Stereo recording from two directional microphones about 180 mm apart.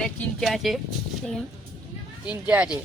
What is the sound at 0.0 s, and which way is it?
Speech, 5° left (ahead or behind).